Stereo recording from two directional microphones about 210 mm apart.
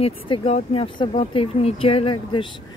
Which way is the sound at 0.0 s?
25° left (ahead or behind).